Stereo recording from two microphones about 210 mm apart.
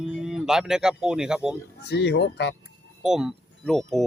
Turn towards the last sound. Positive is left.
turn(degrees=0)  # may be behind; listen again after turning